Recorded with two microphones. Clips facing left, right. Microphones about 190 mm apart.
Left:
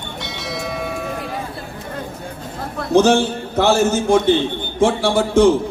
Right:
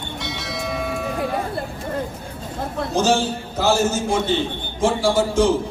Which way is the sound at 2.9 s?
60° left (ahead or behind).